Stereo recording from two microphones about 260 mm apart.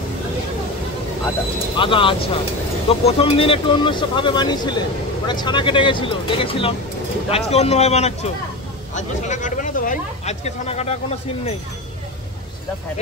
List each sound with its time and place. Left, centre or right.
1.8 s speech: centre